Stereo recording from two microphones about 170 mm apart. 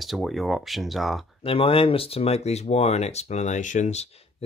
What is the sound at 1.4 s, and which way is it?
Speech, 30° left (ahead or behind).